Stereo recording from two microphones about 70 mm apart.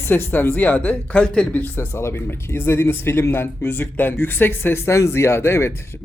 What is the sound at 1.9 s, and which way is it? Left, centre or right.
Speech, left.